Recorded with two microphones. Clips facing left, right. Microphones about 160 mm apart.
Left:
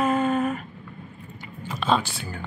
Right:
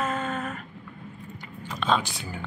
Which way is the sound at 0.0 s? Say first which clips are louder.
Left 7 dB; 10° left (ahead or behind).